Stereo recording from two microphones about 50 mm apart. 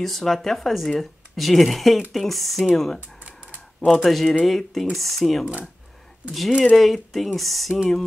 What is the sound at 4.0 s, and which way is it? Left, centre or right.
Speech, centre.